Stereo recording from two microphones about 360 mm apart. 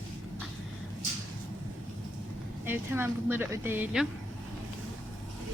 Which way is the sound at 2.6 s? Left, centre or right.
Centre.